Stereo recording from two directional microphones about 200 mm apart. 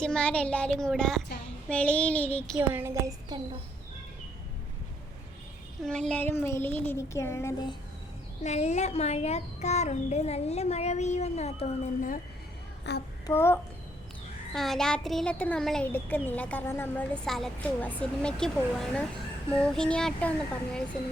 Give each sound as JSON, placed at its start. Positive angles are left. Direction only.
{"t": 0.0, "sound": "a woman's voice", "side_deg": 5}
{"t": 2.6, "sound": "a woman's voice", "side_deg": -10}
{"t": 5.8, "sound": "a child's voice", "side_deg": 5}
{"t": 8.4, "sound": "a child's voice", "side_deg": 35}
{"t": 12.9, "sound": "child singing", "side_deg": 60}
{"t": 13.2, "sound": "a child's voice", "side_deg": 10}
{"t": 14.5, "sound": "a child's voice", "side_deg": 0}